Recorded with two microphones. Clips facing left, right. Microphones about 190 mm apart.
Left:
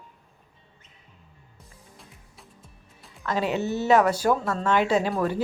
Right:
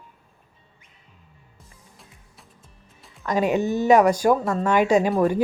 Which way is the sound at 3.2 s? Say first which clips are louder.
Right 4 dB; 15° right (ahead or behind).